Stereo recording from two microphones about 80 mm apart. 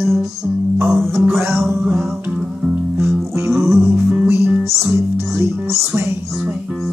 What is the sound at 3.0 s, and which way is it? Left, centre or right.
Music, right.